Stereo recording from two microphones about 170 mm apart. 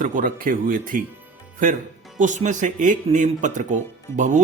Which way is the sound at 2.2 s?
45° right (ahead or behind).